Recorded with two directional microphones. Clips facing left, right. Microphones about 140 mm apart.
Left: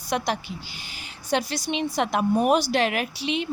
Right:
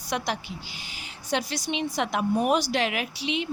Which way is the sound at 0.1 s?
40° left (ahead or behind).